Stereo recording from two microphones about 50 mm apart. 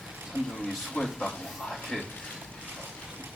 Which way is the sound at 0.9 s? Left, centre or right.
Centre.